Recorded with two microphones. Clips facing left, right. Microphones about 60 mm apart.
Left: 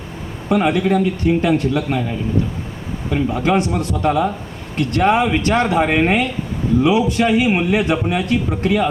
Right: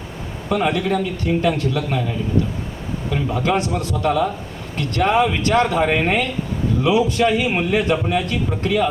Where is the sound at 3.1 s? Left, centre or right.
Centre.